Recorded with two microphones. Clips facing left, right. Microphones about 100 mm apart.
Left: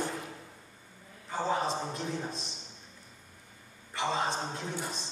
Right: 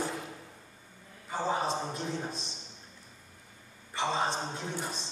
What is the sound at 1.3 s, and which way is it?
Speech, 15° right (ahead or behind).